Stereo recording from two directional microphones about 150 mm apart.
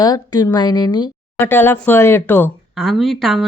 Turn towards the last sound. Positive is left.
turn(degrees=0)  # may be behind; listen again after turning